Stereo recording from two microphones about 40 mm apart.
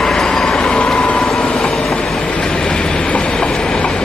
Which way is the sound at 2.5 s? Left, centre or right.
Centre.